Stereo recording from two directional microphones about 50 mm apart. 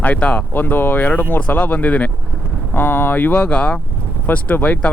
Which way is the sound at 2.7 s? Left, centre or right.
Left.